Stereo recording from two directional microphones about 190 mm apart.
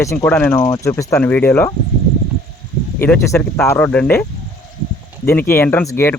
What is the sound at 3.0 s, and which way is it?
Speech, 10° left (ahead or behind).